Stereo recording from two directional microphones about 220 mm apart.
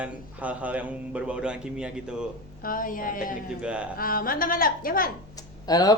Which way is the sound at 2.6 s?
40° left (ahead or behind).